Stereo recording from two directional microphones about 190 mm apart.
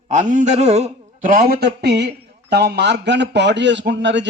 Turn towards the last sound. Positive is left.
turn(degrees=-70)  # may be behind; listen again after turning